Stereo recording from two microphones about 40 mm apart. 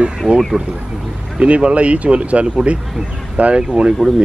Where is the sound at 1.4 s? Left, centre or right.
Right.